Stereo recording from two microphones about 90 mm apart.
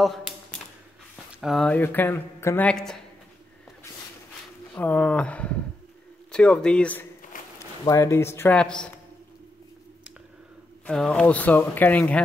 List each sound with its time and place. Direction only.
0.0 s a sound: centre (ahead or behind)
1.4 s speech: centre (ahead or behind)
1.7 s speech: 20° left (ahead or behind)
2.6 s speech: 5° left (ahead or behind)
4.7 s speech: 15° left (ahead or behind)
7.9 s speech: 35° left (ahead or behind)
8.5 s speech: 10° left (ahead or behind)
10.9 s speech: 10° left (ahead or behind)